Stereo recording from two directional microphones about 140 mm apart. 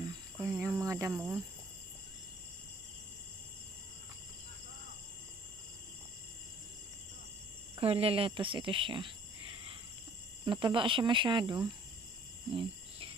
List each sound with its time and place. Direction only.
0.4 s cricket: 20° right (ahead or behind)
7.7 s speech: 45° right (ahead or behind)
10.4 s speech: 35° right (ahead or behind)